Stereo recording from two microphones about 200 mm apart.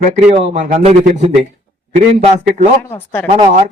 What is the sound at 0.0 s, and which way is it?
Speech, 35° right (ahead or behind).